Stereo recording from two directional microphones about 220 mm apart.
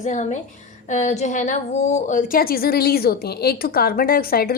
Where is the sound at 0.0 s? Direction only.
35° left (ahead or behind).